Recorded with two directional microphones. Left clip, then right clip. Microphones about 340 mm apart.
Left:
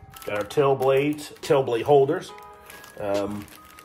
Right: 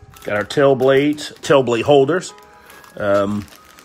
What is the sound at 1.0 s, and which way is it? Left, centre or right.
Speech, right.